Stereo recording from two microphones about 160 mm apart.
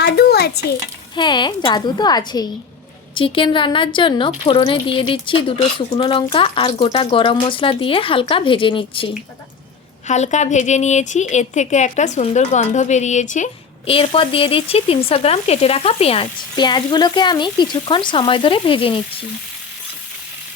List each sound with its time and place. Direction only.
0.0 s a sound: 90° left
1.1 s a woman's voice: 30° left (ahead or behind)
10.1 s speech: 45° left (ahead or behind)
13.8 s speech: 35° left (ahead or behind)